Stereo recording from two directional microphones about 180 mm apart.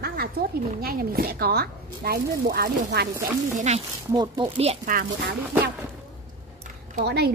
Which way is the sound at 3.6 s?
40° right (ahead or behind).